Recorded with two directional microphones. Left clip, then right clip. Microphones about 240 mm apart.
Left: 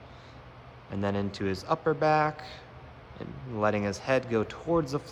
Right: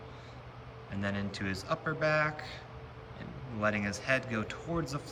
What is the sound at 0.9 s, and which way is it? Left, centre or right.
Speech, centre.